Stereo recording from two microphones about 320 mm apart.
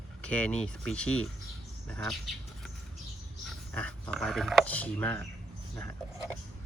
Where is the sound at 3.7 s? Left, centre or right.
Centre.